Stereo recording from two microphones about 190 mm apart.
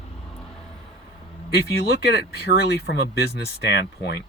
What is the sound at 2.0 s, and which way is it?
Speech, 60° left (ahead or behind).